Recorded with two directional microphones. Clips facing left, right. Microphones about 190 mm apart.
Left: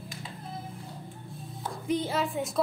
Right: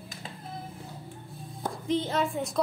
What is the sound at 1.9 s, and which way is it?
Speech, 10° left (ahead or behind).